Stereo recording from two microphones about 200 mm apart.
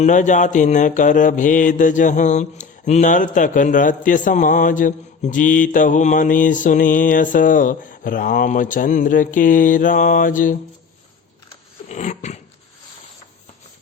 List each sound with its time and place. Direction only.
0.0 s mantra: 40° left (ahead or behind)
11.9 s dog: 35° left (ahead or behind)